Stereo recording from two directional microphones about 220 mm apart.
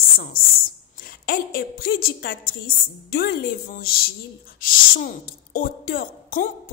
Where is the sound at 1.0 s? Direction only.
40° left (ahead or behind).